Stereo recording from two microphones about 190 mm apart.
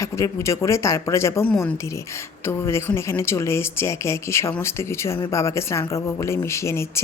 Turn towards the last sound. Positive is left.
turn(degrees=15)  # may be behind; listen again after turning